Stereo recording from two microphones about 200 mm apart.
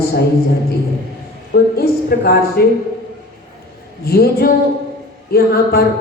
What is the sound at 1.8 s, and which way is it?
Speech, 50° left (ahead or behind).